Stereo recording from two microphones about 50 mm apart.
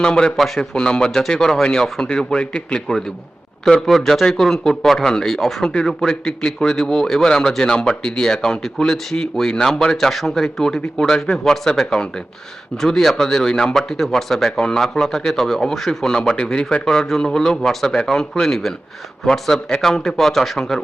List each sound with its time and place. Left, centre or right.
0.0 s speech: centre
0.3 s speech: centre